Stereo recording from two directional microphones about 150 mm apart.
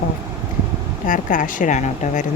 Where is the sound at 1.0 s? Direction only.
60° left (ahead or behind).